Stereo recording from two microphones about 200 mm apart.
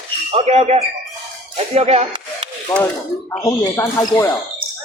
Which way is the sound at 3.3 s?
20° left (ahead or behind).